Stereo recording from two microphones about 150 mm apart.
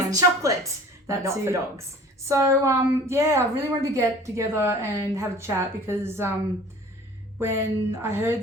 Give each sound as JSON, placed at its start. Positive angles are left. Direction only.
{"t": 0.4, "sound": "a woman's voice", "side_deg": -20}
{"t": 7.3, "sound": "speech", "side_deg": -15}